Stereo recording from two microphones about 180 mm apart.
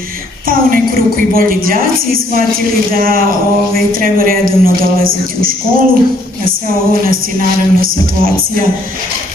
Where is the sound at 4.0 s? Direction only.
55° right (ahead or behind).